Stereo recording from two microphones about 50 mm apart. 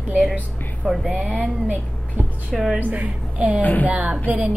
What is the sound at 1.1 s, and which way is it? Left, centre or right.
Speech, right.